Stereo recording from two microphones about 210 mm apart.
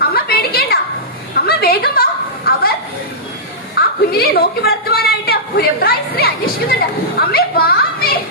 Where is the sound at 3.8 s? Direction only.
45° left (ahead or behind).